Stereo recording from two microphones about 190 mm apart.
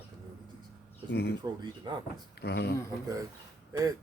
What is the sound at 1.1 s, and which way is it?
Speech, 60° left (ahead or behind).